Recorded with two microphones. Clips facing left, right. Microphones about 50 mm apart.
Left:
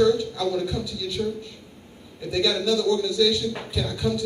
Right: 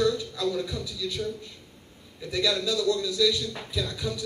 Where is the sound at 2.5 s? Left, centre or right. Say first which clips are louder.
Left 4 dB; left.